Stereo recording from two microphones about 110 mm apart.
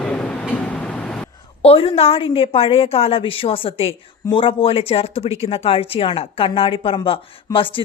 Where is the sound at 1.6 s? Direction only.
60° left (ahead or behind).